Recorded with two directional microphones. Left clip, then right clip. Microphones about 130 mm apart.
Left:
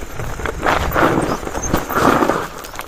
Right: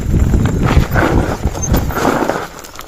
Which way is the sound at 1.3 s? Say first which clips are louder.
Even; 15° right (ahead or behind).